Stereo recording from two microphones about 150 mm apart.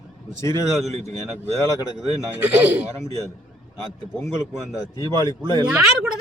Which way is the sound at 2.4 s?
10° right (ahead or behind).